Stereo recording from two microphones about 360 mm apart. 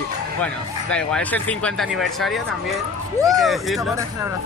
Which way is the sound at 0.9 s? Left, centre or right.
Centre.